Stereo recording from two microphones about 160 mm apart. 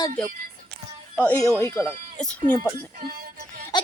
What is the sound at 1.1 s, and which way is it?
Speech, 5° left (ahead or behind).